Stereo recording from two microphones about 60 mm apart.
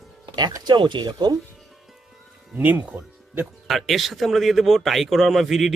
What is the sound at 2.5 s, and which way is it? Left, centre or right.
Speech, right.